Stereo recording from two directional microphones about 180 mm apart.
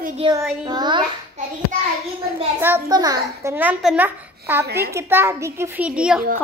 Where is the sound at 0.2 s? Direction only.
30° right (ahead or behind).